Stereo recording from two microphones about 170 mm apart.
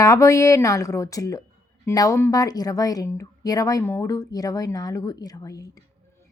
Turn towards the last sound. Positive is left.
turn(degrees=20)  # may be behind; listen again after turning